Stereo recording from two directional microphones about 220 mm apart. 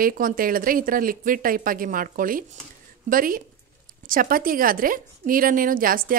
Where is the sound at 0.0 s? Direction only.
40° right (ahead or behind).